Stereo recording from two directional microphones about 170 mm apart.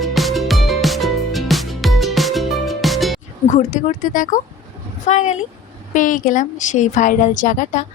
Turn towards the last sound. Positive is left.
turn(degrees=50)  # may be behind; listen again after turning